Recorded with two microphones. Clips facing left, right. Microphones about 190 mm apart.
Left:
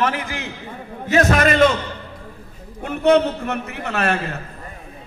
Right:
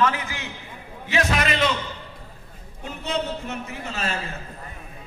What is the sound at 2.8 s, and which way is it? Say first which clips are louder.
A man's voice: left 13 dB; 60° left (ahead or behind).